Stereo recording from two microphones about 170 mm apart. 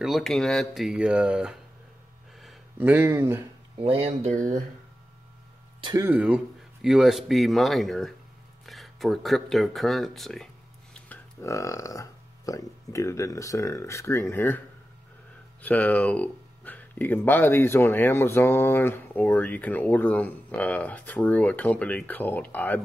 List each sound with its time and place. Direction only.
0.0 s a man's voice: centre (ahead or behind)
2.8 s speech: 10° right (ahead or behind)
3.8 s speech: 35° right (ahead or behind)
5.8 s a sound: 25° right (ahead or behind)
6.0 s a man's voice: 10° right (ahead or behind)
8.6 s a sound: centre (ahead or behind)
11.4 s speech: 20° left (ahead or behind)
15.6 s speech: 10° left (ahead or behind)